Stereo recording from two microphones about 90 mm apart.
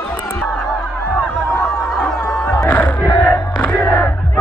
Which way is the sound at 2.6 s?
20° left (ahead or behind).